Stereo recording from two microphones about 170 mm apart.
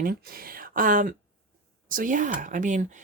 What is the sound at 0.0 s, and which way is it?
A woman's voice, 60° right (ahead or behind).